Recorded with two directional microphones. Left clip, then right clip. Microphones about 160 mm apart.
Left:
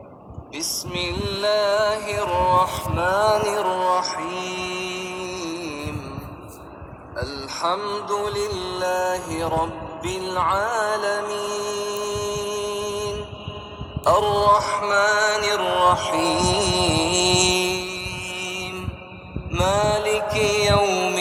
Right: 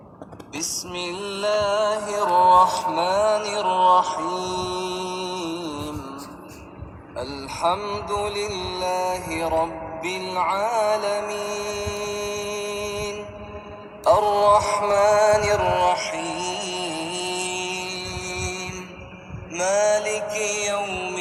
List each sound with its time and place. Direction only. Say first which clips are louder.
0.5 s music: left 2 dB; 20° right (ahead or behind)
2.4 s mantra: right 5 dB; 40° right (ahead or behind)
3.2 s music: left 2 dB; 25° left (ahead or behind)
3.6 s music: right 3 dB; 5° left (ahead or behind)
4.4 s chant: right 1 dB; 10° left (ahead or behind)
5.2 s music: right 1 dB; 20° right (ahead or behind)
7.3 s a sound: right 2 dB; 15° left (ahead or behind)
7.7 s music: left 2 dB; 20° right (ahead or behind)
14.2 s music: left 1 dB; 10° right (ahead or behind)
14.5 s music: even; 25° right (ahead or behind)
15.4 s music: even; centre (ahead or behind)
16.1 s mantra: left 7 dB; 45° left (ahead or behind); by 17.9 s 70° left (ahead or behind)
19.5 s music: even; 20° left (ahead or behind)
20.8 s music: left 7 dB; 80° left